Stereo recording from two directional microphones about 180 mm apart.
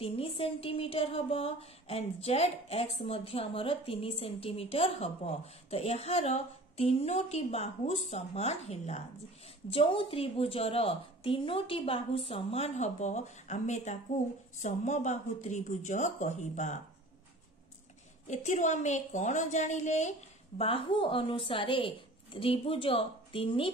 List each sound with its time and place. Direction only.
0.0 s speech: 30° left (ahead or behind)
18.2 s speech: 40° left (ahead or behind)